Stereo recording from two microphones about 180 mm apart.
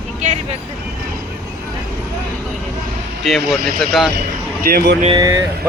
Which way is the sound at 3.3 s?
Centre (ahead or behind).